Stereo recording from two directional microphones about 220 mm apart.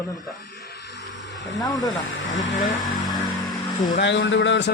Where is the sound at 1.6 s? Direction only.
15° left (ahead or behind).